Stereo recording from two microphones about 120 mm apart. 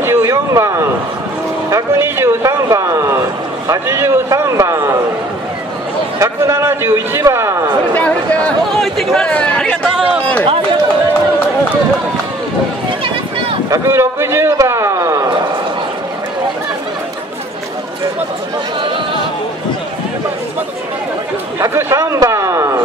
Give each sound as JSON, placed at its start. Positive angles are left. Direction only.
{"t": 0.0, "sound": "a sound", "side_deg": -20}
{"t": 1.7, "sound": "a man's voice", "side_deg": -20}
{"t": 6.1, "sound": "a man's voice", "side_deg": -25}
{"t": 8.5, "sound": "speech", "side_deg": 5}
{"t": 13.7, "sound": "speech", "side_deg": -20}
{"t": 21.5, "sound": "a sound", "side_deg": -25}